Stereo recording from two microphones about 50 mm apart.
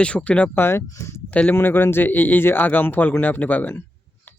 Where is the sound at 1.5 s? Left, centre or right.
Left.